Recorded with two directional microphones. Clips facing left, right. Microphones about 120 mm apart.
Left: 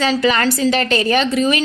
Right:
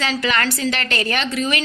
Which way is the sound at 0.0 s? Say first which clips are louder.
Left 5 dB; 35° left (ahead or behind).